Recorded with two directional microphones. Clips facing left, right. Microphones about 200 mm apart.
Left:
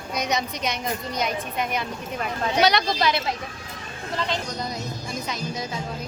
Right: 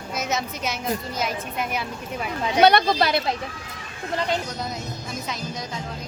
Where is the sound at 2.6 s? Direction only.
55° right (ahead or behind).